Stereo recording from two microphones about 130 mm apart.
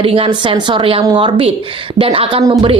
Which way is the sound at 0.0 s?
45° right (ahead or behind).